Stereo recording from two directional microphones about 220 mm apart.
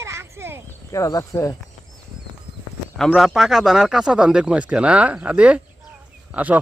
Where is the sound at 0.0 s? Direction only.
15° right (ahead or behind).